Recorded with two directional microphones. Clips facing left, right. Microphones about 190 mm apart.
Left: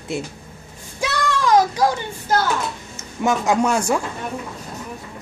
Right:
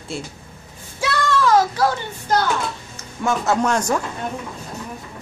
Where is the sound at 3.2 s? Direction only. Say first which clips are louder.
Left 1 dB; 15° left (ahead or behind).